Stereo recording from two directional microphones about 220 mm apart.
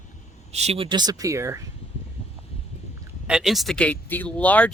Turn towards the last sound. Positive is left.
turn(degrees=5)  # may be behind; listen again after turning